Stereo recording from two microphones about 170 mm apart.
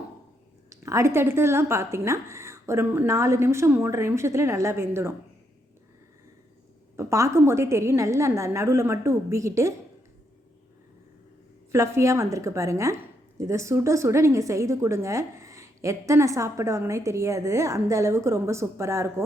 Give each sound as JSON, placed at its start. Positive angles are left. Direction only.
{"t": 0.7, "sound": "a woman's voice", "side_deg": -20}
{"t": 6.9, "sound": "a woman's voice", "side_deg": -15}
{"t": 11.7, "sound": "a woman's voice", "side_deg": -15}